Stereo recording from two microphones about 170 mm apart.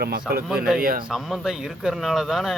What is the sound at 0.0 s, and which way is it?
A man's voice, 65° right (ahead or behind).